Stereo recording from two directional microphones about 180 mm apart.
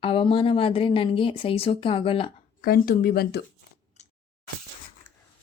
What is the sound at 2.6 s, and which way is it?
Speech, 60° left (ahead or behind).